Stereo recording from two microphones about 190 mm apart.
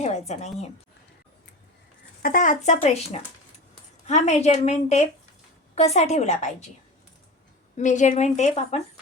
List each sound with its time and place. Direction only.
0.0 s a woman's voice: 35° left (ahead or behind)
2.2 s speech: 45° left (ahead or behind)
2.8 s a woman's voice: 30° left (ahead or behind)
7.8 s a woman's voice: 40° left (ahead or behind)